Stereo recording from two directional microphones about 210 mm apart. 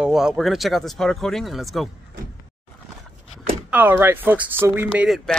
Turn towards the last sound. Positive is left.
turn(degrees=-5)  # may be behind; listen again after turning